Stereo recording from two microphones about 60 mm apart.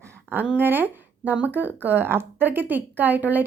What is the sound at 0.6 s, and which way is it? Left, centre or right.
A woman's voice, right.